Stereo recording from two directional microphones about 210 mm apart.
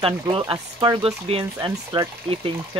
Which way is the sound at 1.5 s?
15° right (ahead or behind).